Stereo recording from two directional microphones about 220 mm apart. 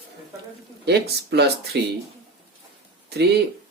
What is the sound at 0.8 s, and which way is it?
Speech, 50° right (ahead or behind).